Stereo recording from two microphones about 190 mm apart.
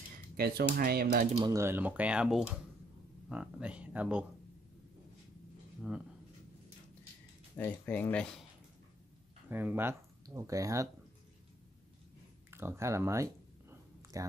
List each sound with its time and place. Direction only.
0.4 s speech: 55° right (ahead or behind)
1.5 s speech: 15° right (ahead or behind)
5.8 s speech: 5° right (ahead or behind)
7.5 s speech: 10° left (ahead or behind)
9.5 s speech: 10° right (ahead or behind)
12.4 s a sound: 15° right (ahead or behind)